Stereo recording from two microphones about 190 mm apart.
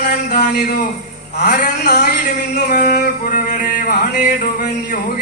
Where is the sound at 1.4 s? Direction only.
60° left (ahead or behind).